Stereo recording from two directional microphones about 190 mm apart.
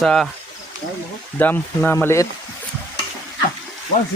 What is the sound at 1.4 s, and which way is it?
Speech, 10° left (ahead or behind).